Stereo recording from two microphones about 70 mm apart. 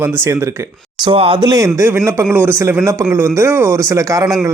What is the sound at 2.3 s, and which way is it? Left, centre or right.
A man's voice, right.